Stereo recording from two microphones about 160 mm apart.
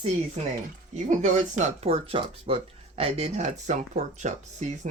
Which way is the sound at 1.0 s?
50° right (ahead or behind).